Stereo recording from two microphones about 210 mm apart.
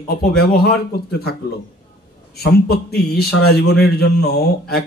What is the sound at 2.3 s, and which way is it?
Speech, 50° left (ahead or behind).